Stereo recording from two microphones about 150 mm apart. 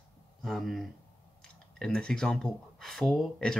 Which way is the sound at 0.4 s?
Centre (ahead or behind).